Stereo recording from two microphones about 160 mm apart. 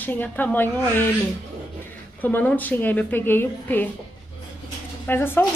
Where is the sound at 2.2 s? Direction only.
10° left (ahead or behind).